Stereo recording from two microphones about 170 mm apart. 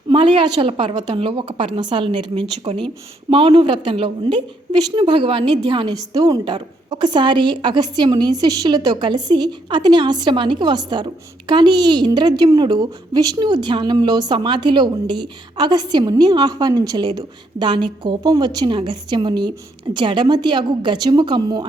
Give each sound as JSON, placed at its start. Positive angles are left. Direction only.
{"t": 0.1, "sound": "a woman's voice", "side_deg": -30}